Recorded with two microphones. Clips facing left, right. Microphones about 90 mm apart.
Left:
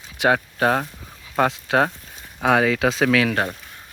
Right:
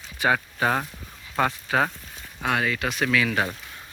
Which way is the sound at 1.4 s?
80° left.